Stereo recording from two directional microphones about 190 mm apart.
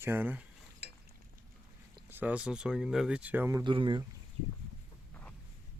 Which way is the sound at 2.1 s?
10° right (ahead or behind).